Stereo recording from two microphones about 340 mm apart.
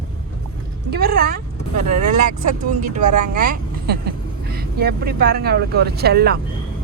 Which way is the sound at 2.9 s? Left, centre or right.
Right.